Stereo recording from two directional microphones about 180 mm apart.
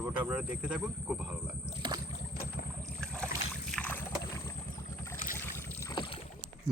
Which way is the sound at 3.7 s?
5° left (ahead or behind).